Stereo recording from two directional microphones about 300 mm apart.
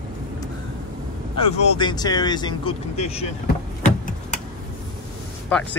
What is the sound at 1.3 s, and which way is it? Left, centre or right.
Speech, left.